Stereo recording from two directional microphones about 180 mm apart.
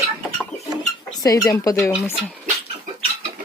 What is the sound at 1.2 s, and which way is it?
Dishes, 20° left (ahead or behind).